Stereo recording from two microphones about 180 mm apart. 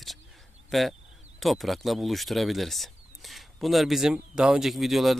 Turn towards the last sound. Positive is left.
turn(degrees=0)  # may be behind; listen again after turning